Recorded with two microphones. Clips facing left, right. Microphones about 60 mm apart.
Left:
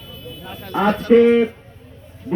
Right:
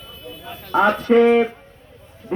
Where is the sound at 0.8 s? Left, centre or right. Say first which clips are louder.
Left 2 dB; right.